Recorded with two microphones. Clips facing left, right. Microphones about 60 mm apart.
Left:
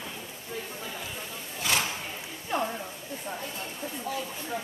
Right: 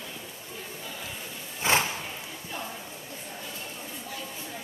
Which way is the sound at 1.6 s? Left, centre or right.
Right.